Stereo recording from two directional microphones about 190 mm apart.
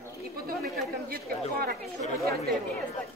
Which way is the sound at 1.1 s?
50° right (ahead or behind).